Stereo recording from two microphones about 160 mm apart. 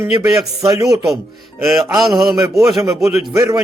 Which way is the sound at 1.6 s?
Centre (ahead or behind).